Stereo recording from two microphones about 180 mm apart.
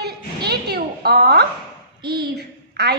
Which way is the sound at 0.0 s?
65° right (ahead or behind).